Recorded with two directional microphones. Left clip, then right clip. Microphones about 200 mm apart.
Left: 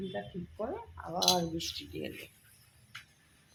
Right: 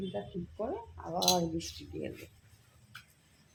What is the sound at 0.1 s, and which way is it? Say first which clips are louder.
Speech: right 1 dB; centre (ahead or behind).